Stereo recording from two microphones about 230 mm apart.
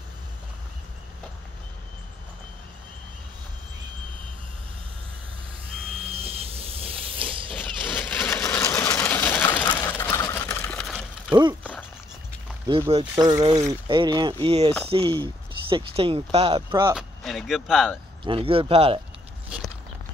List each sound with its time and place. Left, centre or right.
5.9 s vehicle: right
7.5 s sewing machine: centre
12.6 s speech: right
16.9 s speech: centre
18.2 s speech: right